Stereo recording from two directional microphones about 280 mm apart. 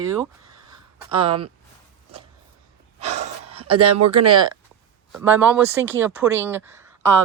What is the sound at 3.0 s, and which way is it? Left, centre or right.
Gasp, right.